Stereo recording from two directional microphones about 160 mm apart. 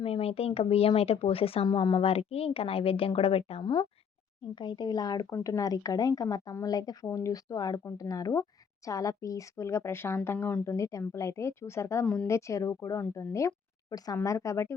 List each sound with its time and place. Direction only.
0.0 s a woman's voice: 40° left (ahead or behind); by 14.8 s 20° left (ahead or behind)